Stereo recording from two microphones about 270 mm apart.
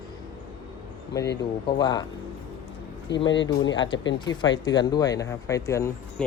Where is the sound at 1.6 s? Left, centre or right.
Centre.